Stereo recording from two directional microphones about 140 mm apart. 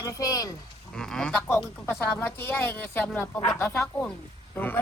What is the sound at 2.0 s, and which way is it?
Speech, 15° left (ahead or behind).